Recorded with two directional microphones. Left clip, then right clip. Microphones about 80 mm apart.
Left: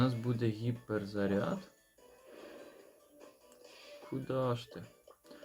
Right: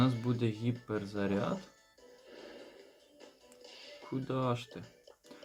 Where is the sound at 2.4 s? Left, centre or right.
Left.